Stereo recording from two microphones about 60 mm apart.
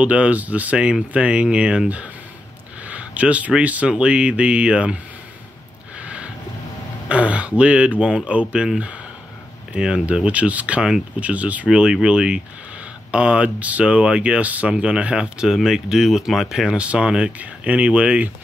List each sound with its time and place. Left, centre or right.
0.0 s speech: right
5.9 s a sound: right
7.1 s speech: right
9.7 s speech: centre
10.2 s speech: right